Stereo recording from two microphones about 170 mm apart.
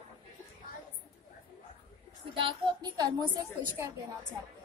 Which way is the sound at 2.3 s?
30° right (ahead or behind).